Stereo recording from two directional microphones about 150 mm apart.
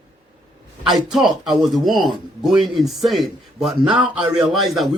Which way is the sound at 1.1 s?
Centre (ahead or behind).